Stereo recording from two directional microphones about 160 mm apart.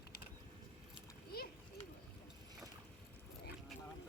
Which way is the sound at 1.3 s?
75° left (ahead or behind).